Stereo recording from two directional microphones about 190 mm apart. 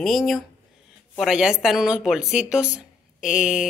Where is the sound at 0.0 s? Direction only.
Centre (ahead or behind).